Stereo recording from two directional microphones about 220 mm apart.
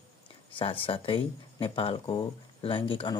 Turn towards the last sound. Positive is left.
turn(degrees=25)  # may be behind; listen again after turning